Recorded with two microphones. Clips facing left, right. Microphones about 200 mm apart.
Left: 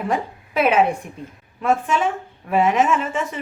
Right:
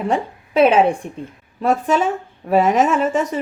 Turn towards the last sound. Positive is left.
turn(degrees=-40)  # may be behind; listen again after turning